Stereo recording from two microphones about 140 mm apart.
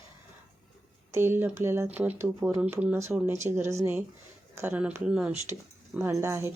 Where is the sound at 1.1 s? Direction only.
15° right (ahead or behind).